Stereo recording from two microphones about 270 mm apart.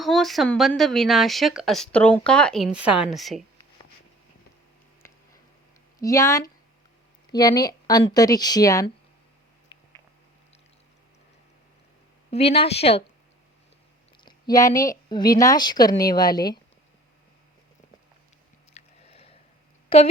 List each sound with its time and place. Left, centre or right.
0.0 s speech: centre
6.0 s speech: centre
12.3 s a woman's voice: left
14.3 s a sound: centre
14.8 s speech: centre
18.7 s a sound: left